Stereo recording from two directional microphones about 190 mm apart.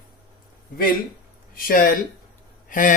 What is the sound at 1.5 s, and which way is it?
Speech, 50° left (ahead or behind).